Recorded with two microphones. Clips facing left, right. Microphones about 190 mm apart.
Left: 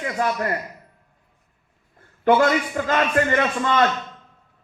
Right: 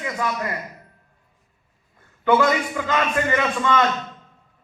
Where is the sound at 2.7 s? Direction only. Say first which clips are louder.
Left 2 dB; 45° left (ahead or behind).